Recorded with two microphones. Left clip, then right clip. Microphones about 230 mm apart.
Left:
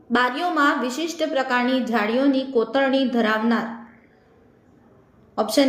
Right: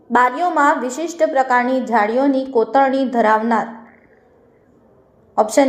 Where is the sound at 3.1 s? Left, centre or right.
Centre.